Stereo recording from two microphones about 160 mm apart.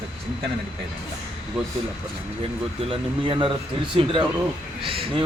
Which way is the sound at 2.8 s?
30° right (ahead or behind).